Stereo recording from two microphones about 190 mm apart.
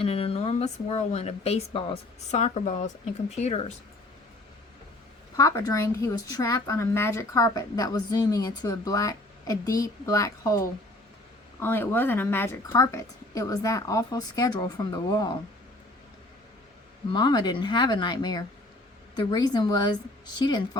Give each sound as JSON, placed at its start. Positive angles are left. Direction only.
{"t": 0.0, "sound": "speech", "side_deg": 30}
{"t": 5.4, "sound": "a woman's voice", "side_deg": 20}
{"t": 17.1, "sound": "a woman's voice", "side_deg": 25}